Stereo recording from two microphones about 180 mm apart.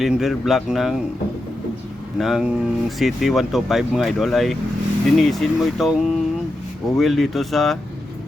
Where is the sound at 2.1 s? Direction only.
Centre (ahead or behind).